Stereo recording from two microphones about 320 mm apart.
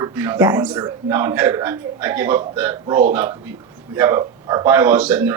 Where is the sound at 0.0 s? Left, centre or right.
Centre.